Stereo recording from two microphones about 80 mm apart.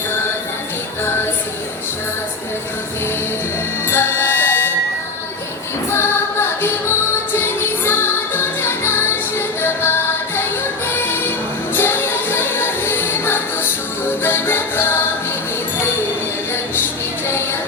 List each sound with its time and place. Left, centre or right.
1.0 s music: left
3.8 s music: left
5.9 s music: left
10.9 s music: left